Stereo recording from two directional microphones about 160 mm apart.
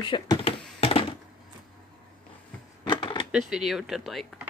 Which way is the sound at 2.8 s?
30° left (ahead or behind).